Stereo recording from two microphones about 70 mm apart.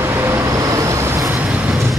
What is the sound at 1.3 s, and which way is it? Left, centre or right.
Vehicle, right.